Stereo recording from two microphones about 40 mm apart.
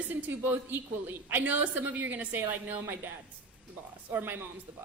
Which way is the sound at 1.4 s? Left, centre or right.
Right.